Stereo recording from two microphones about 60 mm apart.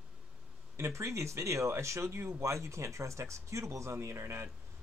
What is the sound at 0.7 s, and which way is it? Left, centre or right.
Speech, right.